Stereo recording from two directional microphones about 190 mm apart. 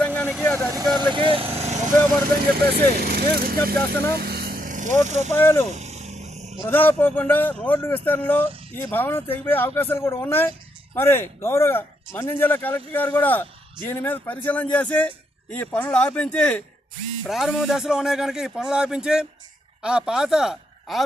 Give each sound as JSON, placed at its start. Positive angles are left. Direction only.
{"t": 0.0, "sound": "vehicle", "side_deg": 5}
{"t": 0.9, "sound": "vehicle", "side_deg": -25}
{"t": 2.7, "sound": "speech", "side_deg": -55}
{"t": 4.1, "sound": "vehicle", "side_deg": -55}
{"t": 5.0, "sound": "speech", "side_deg": -40}
{"t": 5.3, "sound": "a man's voice", "side_deg": 10}
{"t": 5.7, "sound": "vehicle", "side_deg": -35}
{"t": 6.6, "sound": "a man's voice", "side_deg": 10}